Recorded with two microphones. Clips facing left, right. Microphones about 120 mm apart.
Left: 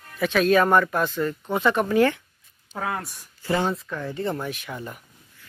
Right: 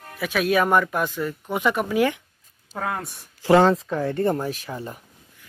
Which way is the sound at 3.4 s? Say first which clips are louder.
Right 8 dB; 90° right.